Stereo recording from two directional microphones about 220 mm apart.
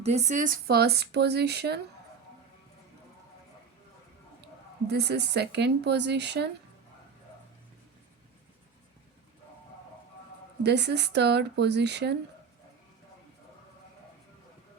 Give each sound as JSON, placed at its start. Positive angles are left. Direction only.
{"t": 0.0, "sound": "speech", "side_deg": -30}
{"t": 4.9, "sound": "speech", "side_deg": -50}
{"t": 10.6, "sound": "speech", "side_deg": -50}